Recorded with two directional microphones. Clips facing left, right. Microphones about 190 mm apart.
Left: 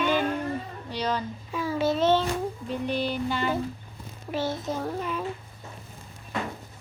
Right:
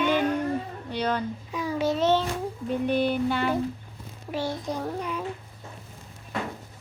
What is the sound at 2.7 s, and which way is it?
Music, 55° right (ahead or behind).